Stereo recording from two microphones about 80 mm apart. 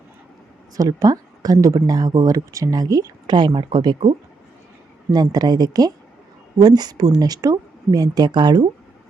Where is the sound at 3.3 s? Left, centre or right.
Right.